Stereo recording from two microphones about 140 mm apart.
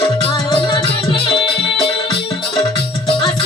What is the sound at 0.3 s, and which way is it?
Music, 30° left (ahead or behind).